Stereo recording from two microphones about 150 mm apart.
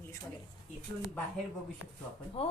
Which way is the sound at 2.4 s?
40° left (ahead or behind).